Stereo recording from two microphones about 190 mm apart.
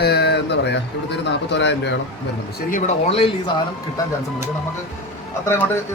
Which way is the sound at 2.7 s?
35° left (ahead or behind).